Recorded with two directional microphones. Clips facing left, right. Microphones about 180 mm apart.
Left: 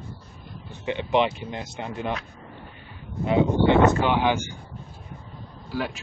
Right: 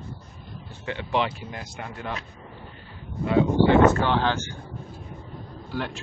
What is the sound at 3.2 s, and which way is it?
Speech, 20° left (ahead or behind).